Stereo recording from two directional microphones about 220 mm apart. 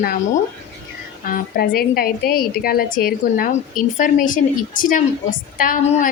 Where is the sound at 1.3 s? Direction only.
45° left (ahead or behind).